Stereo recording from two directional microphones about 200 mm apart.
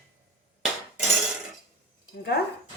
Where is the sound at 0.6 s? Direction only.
Centre (ahead or behind).